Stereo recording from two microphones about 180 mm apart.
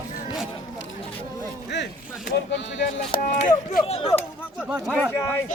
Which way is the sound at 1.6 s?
75° left (ahead or behind).